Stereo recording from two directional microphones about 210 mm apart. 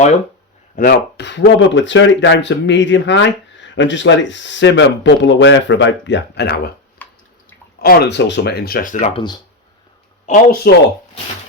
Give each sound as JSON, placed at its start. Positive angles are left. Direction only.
{"t": 0.8, "sound": "speech", "side_deg": 45}
{"t": 7.0, "sound": "bathtub", "side_deg": 10}
{"t": 7.8, "sound": "speech", "side_deg": 50}
{"t": 10.2, "sound": "speech", "side_deg": 40}